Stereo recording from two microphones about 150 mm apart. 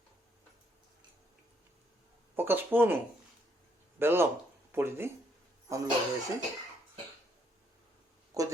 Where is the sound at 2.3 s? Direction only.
15° right (ahead or behind).